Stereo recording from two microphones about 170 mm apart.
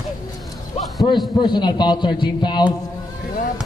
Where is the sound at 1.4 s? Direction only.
25° left (ahead or behind).